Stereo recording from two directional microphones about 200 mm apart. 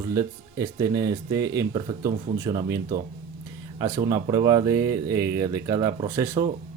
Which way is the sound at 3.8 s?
20° right (ahead or behind).